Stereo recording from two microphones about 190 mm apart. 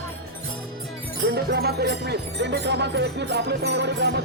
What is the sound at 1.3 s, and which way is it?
Music, 60° right (ahead or behind).